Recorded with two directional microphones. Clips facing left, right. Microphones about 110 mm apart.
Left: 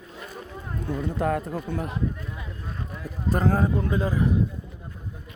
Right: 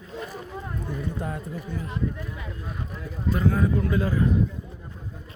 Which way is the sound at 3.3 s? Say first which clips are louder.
Left 1 dB; 40° left (ahead or behind).